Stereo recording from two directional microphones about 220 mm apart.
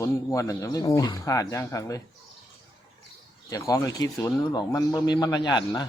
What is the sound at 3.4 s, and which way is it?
A man's voice, 15° left (ahead or behind).